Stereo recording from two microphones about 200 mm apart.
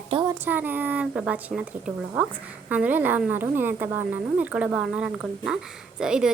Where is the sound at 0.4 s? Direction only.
10° right (ahead or behind).